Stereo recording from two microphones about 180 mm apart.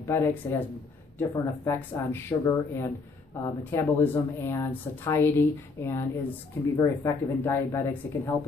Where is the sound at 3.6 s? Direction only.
10° left (ahead or behind).